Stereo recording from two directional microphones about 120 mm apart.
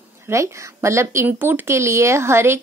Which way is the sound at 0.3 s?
25° right (ahead or behind).